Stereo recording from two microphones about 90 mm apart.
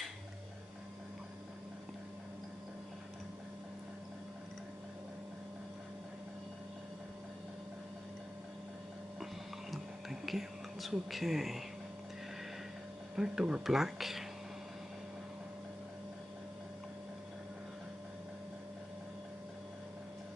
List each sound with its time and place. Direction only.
9.2 s whispering: centre (ahead or behind)
13.1 s speech: 5° right (ahead or behind)